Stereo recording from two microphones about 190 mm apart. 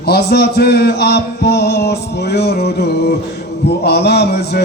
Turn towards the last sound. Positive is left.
turn(degrees=60)  # may be behind; listen again after turning